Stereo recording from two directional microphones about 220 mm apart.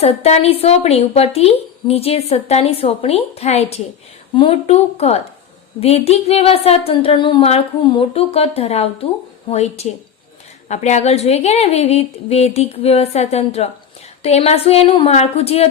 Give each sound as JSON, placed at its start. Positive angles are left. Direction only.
{"t": 0.0, "sound": "speech", "side_deg": 30}